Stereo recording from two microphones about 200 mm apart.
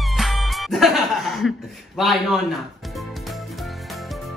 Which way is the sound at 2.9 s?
Centre (ahead or behind).